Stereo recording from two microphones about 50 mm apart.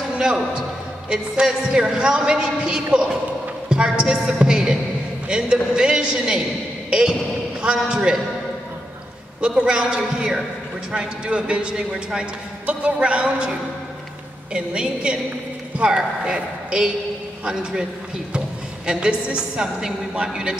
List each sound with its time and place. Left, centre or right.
1.1 s a man's voice: centre
9.4 s a man's voice: centre
12.6 s speech: right
14.5 s a man's voice: centre
18.9 s a man's voice: centre